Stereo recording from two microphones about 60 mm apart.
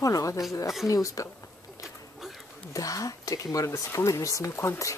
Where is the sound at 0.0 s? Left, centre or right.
Left.